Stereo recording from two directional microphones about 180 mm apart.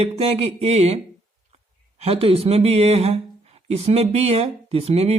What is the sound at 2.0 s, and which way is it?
Speech, 35° right (ahead or behind).